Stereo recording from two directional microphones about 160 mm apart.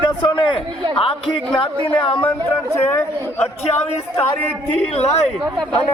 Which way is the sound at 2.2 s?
15° left (ahead or behind).